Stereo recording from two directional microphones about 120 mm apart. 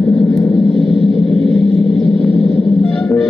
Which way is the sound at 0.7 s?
50° right (ahead or behind).